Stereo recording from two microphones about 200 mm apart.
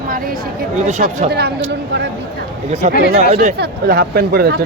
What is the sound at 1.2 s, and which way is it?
Speech, 55° right (ahead or behind).